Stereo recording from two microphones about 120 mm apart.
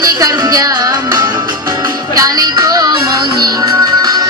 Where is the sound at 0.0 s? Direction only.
30° right (ahead or behind).